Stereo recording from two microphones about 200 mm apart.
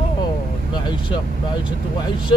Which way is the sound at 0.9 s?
25° left (ahead or behind).